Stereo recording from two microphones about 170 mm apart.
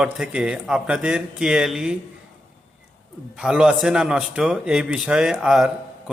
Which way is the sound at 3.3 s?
5° right (ahead or behind).